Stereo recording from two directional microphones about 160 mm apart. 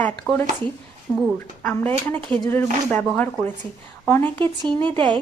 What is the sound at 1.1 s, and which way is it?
Speech, 10° right (ahead or behind).